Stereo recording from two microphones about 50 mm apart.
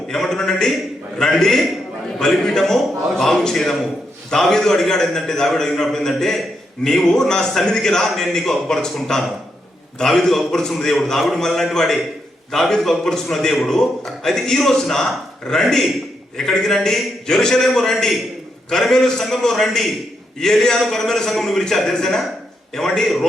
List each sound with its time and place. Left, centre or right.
0.1 s a man's voice: centre